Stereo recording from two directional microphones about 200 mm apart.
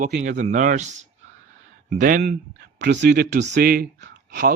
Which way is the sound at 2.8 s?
55° right (ahead or behind).